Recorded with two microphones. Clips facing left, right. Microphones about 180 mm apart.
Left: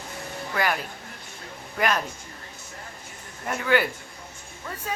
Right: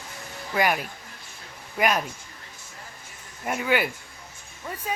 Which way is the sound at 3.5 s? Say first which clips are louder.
Left 1 dB; 15° right (ahead or behind).